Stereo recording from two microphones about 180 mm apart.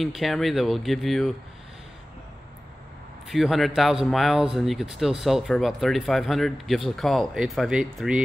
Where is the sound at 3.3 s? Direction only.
Centre (ahead or behind).